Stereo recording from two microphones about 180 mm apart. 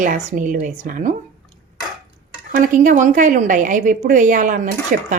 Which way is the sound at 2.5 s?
45° right (ahead or behind).